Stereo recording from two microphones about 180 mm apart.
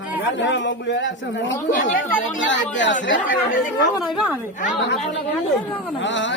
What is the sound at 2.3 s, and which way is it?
Speech, 90° left.